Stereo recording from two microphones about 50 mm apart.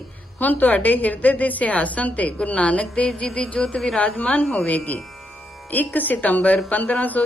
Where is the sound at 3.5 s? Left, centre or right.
Left.